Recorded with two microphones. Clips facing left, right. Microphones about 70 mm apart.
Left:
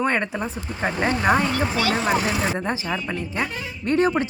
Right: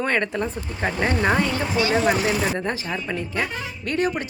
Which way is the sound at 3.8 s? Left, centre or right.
Left.